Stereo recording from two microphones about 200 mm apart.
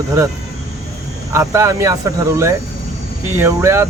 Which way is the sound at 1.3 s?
15° right (ahead or behind).